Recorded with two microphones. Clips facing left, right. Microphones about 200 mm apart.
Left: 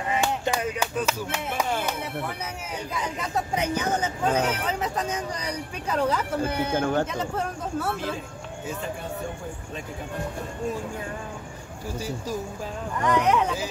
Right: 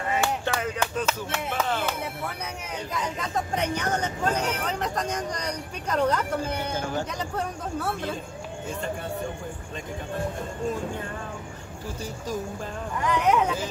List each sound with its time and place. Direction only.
0.2 s a sound: 15° left (ahead or behind)
2.9 s speech: 10° left (ahead or behind)
6.7 s speech: 60° left (ahead or behind)
7.1 s speech: centre (ahead or behind)
13.0 s speech: centre (ahead or behind)